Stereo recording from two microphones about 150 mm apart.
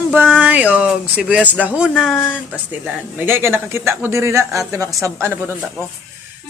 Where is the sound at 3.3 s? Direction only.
15° right (ahead or behind).